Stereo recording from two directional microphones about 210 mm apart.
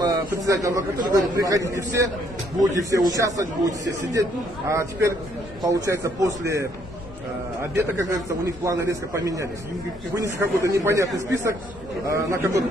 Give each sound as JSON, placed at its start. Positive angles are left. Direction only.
{"t": 0.0, "sound": "a man's voice", "side_deg": -15}
{"t": 7.7, "sound": "a man's voice", "side_deg": -15}